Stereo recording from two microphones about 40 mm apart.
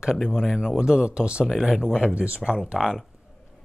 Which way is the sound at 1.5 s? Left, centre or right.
Centre.